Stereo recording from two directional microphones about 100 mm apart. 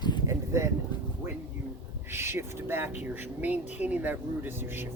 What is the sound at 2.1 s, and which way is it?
Speech, 25° right (ahead or behind).